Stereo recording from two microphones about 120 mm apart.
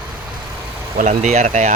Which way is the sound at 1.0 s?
80° right.